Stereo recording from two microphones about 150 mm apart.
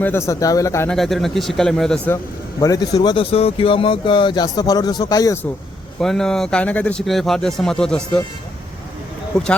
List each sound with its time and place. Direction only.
0.0 s a man's voice: 15° left (ahead or behind)
0.9 s a man's voice: centre (ahead or behind)
2.6 s a man's voice: 25° left (ahead or behind)
6.0 s a man's voice: 5° left (ahead or behind)